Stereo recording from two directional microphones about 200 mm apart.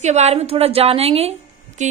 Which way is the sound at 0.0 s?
35° right (ahead or behind).